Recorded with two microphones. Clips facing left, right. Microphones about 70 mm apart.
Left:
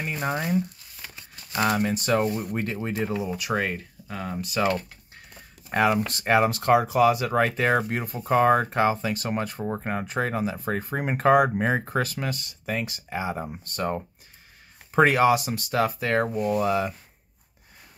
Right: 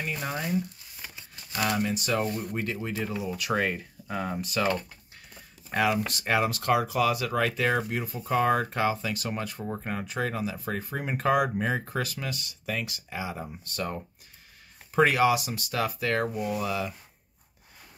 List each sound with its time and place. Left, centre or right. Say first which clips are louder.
0.0 s speech: left 4 dB; left
3.5 s speech: even; centre
5.7 s speech: left 4 dB; left